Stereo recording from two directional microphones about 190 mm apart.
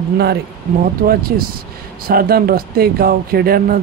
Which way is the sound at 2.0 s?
50° right (ahead or behind).